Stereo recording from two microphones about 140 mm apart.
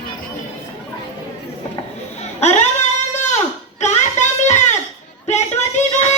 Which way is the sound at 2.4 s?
50° left (ahead or behind).